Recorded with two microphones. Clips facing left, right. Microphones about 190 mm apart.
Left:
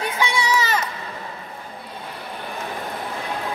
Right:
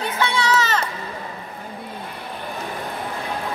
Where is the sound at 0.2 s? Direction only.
10° left (ahead or behind).